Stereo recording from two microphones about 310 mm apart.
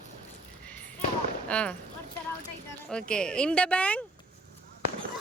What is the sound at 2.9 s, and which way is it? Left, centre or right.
Speech, centre.